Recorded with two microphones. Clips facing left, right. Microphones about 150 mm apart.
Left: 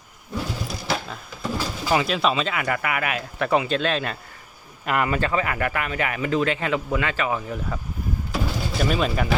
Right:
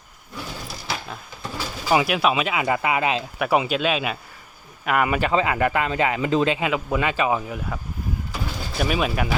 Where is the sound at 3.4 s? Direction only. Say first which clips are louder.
Even; 10° right (ahead or behind).